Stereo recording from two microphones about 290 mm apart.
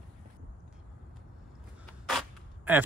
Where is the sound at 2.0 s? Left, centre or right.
Centre.